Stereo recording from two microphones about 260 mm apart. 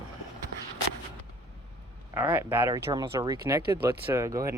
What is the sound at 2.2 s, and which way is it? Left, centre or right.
Speech, centre.